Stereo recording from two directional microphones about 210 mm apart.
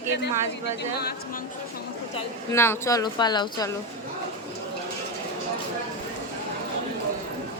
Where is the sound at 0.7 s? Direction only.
50° left (ahead or behind).